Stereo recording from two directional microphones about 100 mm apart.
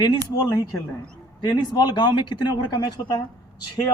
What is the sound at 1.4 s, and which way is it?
Speech, 40° left (ahead or behind).